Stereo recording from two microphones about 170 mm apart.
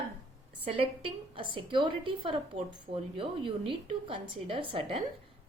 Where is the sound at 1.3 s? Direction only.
30° right (ahead or behind).